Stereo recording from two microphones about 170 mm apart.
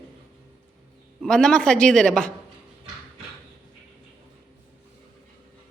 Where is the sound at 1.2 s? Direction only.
5° left (ahead or behind).